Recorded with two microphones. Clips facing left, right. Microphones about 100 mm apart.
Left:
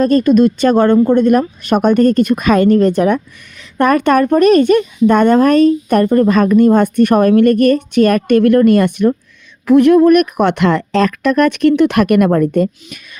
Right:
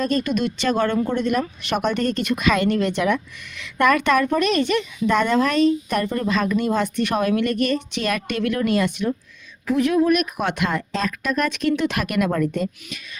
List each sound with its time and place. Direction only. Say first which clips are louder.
0.0 s a woman's voice: left 12 dB; 45° left (ahead or behind)